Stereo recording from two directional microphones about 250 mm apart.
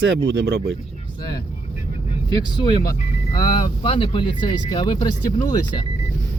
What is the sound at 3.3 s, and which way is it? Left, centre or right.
Speech, centre.